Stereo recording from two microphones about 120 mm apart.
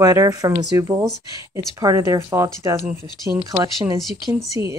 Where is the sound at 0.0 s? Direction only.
30° right (ahead or behind).